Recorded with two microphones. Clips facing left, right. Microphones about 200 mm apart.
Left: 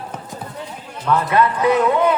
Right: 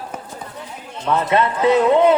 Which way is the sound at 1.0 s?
20° right (ahead or behind).